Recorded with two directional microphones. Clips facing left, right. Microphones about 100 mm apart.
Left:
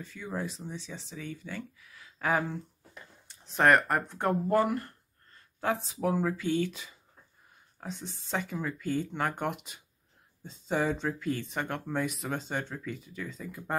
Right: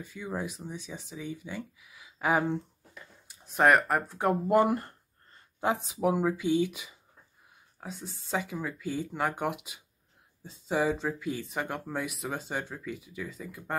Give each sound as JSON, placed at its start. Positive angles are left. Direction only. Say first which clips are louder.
{"t": 0.0, "sound": "speech", "louder": "right 1 dB", "side_deg": -10}
{"t": 4.6, "sound": "a sound", "louder": "right 3 dB", "side_deg": -25}
{"t": 6.0, "sound": "speech", "louder": "right 2 dB", "side_deg": -15}